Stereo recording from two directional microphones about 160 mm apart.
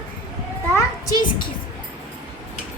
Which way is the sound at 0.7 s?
25° left (ahead or behind).